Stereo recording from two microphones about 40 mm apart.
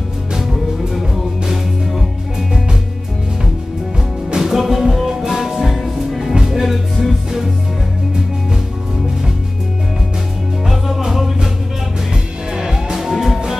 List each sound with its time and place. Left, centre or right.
0.3 s music: centre
4.3 s music: centre
11.0 s music: centre
12.5 s music: centre